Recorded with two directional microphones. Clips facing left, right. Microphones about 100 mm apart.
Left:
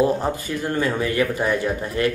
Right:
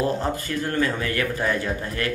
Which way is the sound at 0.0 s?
15° left (ahead or behind).